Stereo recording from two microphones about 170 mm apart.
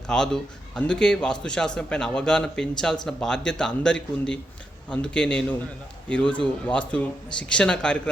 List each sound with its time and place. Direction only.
0.1 s a man's voice: 5° left (ahead or behind)